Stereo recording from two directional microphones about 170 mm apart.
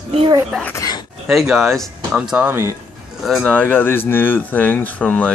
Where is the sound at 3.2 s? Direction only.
Centre (ahead or behind).